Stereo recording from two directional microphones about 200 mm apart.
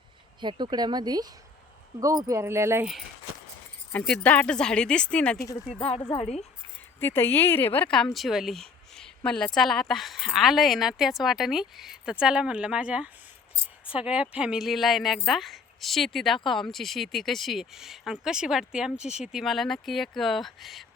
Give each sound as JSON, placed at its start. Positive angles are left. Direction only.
{"t": 0.4, "sound": "speech", "side_deg": -20}
{"t": 3.9, "sound": "speech", "side_deg": 5}
{"t": 5.8, "sound": "speech", "side_deg": 30}
{"t": 7.0, "sound": "a woman's voice", "side_deg": 10}